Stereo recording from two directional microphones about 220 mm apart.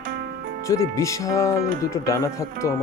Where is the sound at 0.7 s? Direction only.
15° left (ahead or behind).